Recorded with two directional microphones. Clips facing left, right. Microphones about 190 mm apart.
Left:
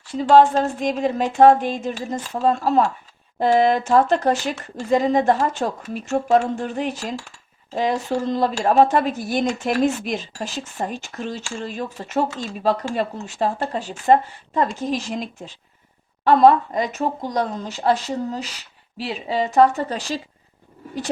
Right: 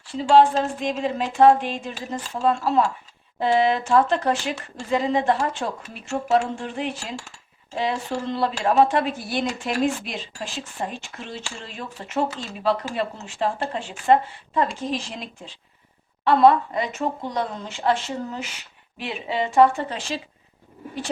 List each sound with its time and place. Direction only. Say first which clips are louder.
0.1 s speech: left 2 dB; 40° left (ahead or behind)
16.2 s speech: left 2 dB; 40° left (ahead or behind)